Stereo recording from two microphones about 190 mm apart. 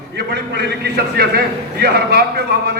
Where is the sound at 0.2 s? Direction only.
60° right (ahead or behind).